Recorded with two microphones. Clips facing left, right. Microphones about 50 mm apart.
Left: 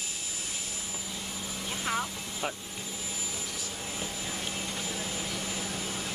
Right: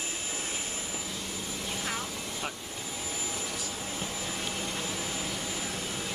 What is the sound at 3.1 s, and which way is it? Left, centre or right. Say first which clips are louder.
Vehicle: right 3 dB; right.